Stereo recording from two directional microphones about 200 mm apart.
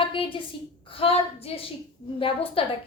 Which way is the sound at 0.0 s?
25° left (ahead or behind).